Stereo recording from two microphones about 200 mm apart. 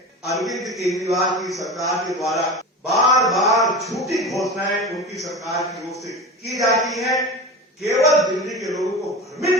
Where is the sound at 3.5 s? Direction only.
Centre (ahead or behind).